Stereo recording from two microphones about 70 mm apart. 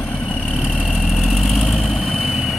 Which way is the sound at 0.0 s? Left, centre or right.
Left.